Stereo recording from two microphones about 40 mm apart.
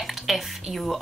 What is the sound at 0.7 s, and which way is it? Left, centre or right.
Speech, centre.